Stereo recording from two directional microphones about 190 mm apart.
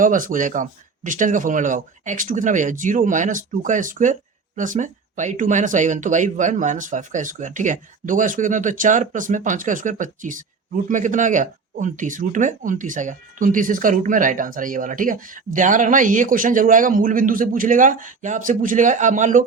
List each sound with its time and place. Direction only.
0.0 s speech: 45° right (ahead or behind)